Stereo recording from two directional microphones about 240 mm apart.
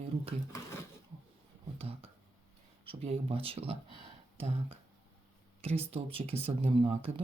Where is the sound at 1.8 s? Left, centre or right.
Right.